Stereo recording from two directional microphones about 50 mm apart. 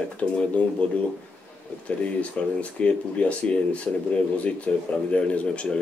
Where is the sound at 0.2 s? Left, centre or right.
Left.